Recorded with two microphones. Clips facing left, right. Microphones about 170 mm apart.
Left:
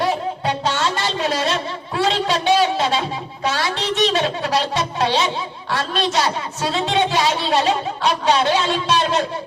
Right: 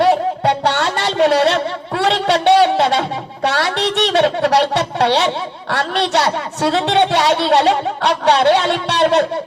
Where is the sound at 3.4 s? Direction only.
65° right (ahead or behind).